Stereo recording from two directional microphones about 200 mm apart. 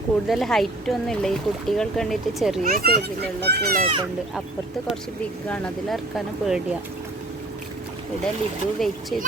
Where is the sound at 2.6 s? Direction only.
50° right (ahead or behind).